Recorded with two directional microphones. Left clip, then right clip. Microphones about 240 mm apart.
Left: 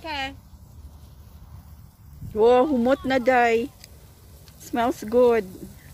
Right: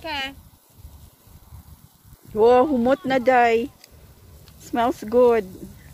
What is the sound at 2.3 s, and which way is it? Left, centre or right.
Speech, centre.